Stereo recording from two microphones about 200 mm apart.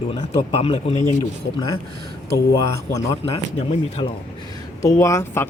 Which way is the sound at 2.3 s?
15° left (ahead or behind).